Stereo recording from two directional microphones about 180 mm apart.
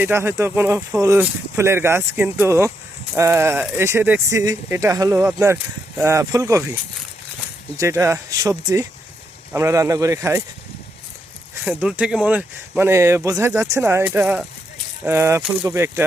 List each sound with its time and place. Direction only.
0.0 s speech: 15° right (ahead or behind)
7.8 s speech: 15° right (ahead or behind)
11.6 s speech: 5° right (ahead or behind)